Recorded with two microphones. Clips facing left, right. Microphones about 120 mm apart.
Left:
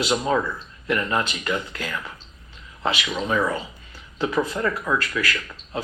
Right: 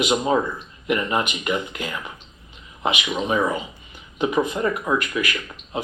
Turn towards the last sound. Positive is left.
turn(degrees=-20)  # may be behind; listen again after turning